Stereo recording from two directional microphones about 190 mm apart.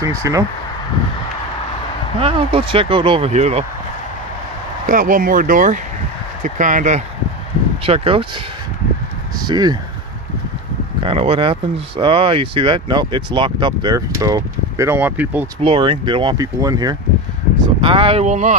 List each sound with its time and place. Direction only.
0.0 s speech: 15° right (ahead or behind)
2.1 s speech: 30° right (ahead or behind)
4.8 s speech: 45° right (ahead or behind)
7.8 s speech: 30° right (ahead or behind)
9.4 s speech: 20° right (ahead or behind)
11.0 s speech: 30° right (ahead or behind); by 15.4 s 10° right (ahead or behind)
15.6 s speech: 25° right (ahead or behind)